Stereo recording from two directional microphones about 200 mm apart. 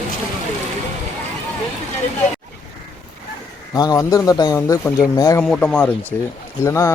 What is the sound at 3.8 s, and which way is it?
Speech, 20° left (ahead or behind).